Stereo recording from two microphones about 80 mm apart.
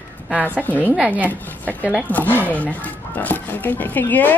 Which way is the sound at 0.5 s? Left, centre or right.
Left.